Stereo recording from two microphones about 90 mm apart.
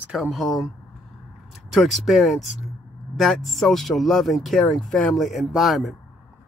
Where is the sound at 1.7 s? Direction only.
Centre (ahead or behind).